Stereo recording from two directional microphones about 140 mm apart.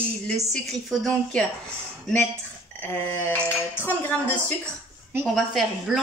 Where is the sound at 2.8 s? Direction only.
15° left (ahead or behind).